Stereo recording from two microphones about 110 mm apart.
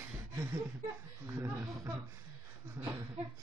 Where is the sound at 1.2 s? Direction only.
25° right (ahead or behind).